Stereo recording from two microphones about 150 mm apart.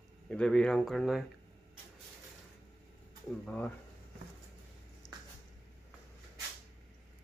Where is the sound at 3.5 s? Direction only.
10° left (ahead or behind).